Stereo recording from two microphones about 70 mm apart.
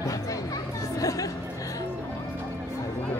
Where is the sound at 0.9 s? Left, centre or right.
Left.